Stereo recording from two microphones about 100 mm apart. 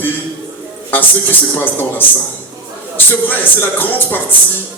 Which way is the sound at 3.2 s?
20° left (ahead or behind).